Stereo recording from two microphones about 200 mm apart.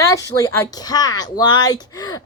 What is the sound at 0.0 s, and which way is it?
Speech, 15° left (ahead or behind).